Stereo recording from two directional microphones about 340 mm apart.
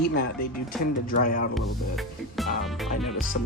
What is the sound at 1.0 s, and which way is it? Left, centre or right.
Speech, left.